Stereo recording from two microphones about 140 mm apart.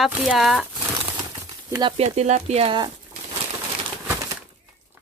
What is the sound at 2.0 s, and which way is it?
Speech, 50° right (ahead or behind).